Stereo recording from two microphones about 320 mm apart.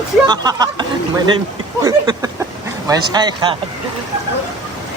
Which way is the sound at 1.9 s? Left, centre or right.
Centre.